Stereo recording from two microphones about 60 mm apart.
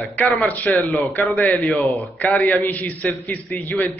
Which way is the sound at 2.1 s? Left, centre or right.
Left.